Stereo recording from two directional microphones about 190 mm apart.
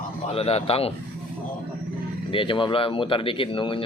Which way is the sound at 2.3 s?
25° left (ahead or behind).